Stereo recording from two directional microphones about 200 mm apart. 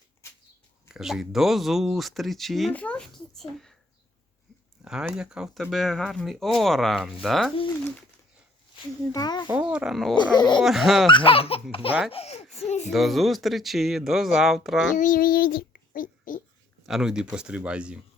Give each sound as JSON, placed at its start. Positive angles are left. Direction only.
{"t": 0.9, "sound": "speech", "side_deg": 0}
{"t": 4.8, "sound": "speech", "side_deg": -5}
{"t": 9.1, "sound": "speech", "side_deg": 20}
{"t": 9.5, "sound": "speech", "side_deg": -5}
{"t": 10.2, "sound": "speech", "side_deg": 20}
{"t": 10.6, "sound": "speech", "side_deg": 0}
{"t": 11.1, "sound": "speech", "side_deg": 25}
{"t": 12.9, "sound": "speech", "side_deg": 0}
{"t": 14.9, "sound": "a child's voice", "side_deg": 40}
{"t": 16.8, "sound": "speech", "side_deg": 0}